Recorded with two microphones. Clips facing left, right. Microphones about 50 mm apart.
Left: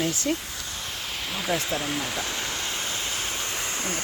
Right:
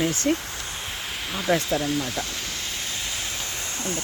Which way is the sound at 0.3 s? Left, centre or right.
Right.